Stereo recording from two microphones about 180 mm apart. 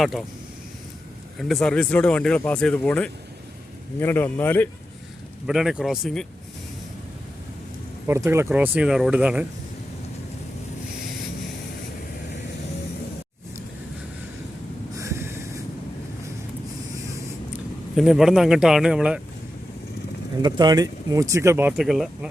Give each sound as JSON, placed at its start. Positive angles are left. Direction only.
{"t": 0.0, "sound": "speech", "side_deg": 0}
{"t": 1.4, "sound": "a man's voice", "side_deg": 0}
{"t": 5.5, "sound": "speech", "side_deg": -5}
{"t": 8.0, "sound": "speech", "side_deg": -15}
{"t": 14.9, "sound": "a sound", "side_deg": -15}
{"t": 16.9, "sound": "a sound", "side_deg": -15}
{"t": 17.9, "sound": "speech", "side_deg": 0}
{"t": 20.4, "sound": "speech", "side_deg": -25}